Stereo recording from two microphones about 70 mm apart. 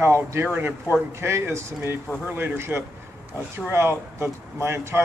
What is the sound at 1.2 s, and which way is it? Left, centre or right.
Speech, right.